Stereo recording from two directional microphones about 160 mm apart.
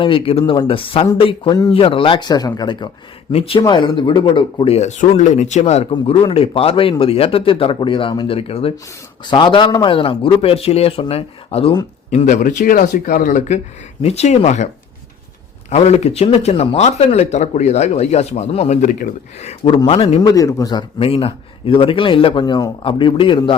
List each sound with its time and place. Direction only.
0.0 s speech: 35° left (ahead or behind)
5.9 s speech: 35° left (ahead or behind)
12.1 s speech: 50° left (ahead or behind)
14.0 s speech: 40° left (ahead or behind)
15.7 s speech: 40° left (ahead or behind)
20.3 s speech: 20° left (ahead or behind)